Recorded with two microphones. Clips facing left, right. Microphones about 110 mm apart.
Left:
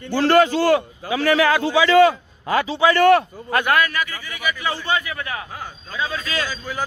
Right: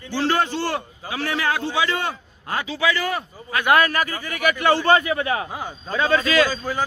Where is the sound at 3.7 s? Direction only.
35° right (ahead or behind); by 4.9 s 65° right (ahead or behind).